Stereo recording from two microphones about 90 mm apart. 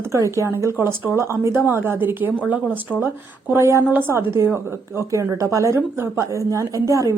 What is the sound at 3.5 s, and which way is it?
Speech, 30° right (ahead or behind).